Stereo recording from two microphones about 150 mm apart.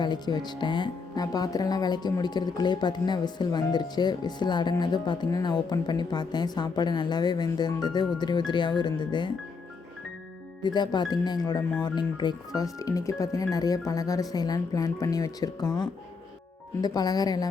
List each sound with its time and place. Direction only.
0.0 s speech: 30° left (ahead or behind)
10.6 s speech: 30° left (ahead or behind)